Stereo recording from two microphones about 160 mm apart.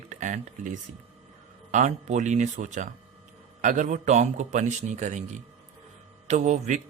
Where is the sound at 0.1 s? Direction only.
50° right (ahead or behind).